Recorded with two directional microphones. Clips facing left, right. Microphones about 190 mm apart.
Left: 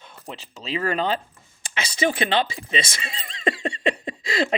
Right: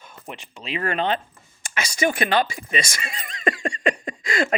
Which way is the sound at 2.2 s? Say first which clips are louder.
Right 1 dB; 25° left (ahead or behind).